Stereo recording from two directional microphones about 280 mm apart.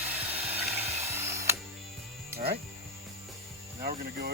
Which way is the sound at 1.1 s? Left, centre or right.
Centre.